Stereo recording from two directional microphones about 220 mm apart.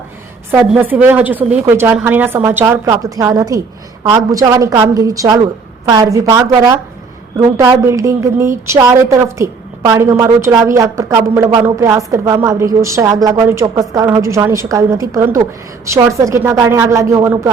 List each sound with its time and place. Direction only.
0.6 s a woman's voice: 5° right (ahead or behind)